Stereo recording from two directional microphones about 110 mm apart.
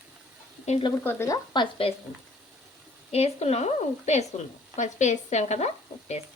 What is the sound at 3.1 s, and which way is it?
Speech, 75° left (ahead or behind).